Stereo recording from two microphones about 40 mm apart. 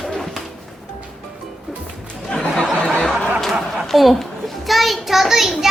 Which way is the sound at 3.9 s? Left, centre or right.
Centre.